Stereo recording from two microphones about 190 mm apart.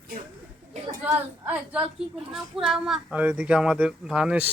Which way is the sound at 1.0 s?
10° right (ahead or behind).